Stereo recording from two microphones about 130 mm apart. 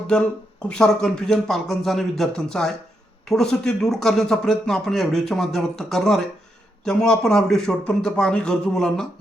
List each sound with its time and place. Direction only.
0.1 s speech: 5° left (ahead or behind)